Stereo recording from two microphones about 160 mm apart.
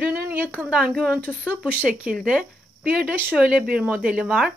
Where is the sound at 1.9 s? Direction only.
5° right (ahead or behind).